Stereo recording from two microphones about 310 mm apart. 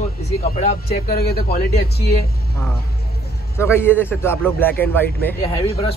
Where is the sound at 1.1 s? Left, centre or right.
Left.